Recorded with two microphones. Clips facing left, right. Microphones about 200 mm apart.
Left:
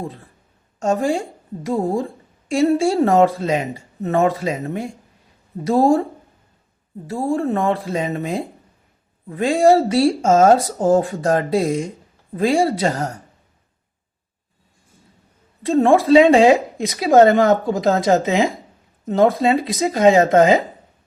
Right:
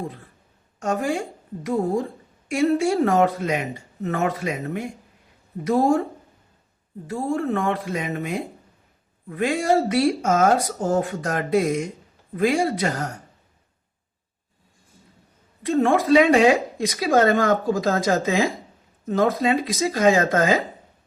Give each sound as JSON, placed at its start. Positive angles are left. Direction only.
{"t": 0.8, "sound": "speech", "side_deg": 30}
{"t": 7.3, "sound": "speech", "side_deg": 30}
{"t": 15.6, "sound": "speech", "side_deg": 30}